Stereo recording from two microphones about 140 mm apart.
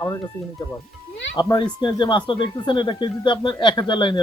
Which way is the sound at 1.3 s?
30° left (ahead or behind).